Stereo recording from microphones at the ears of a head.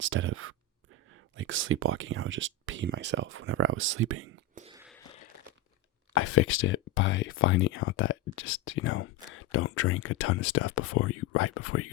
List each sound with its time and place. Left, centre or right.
0.0 s speech: right
4.9 s a sound: left
6.1 s speech: left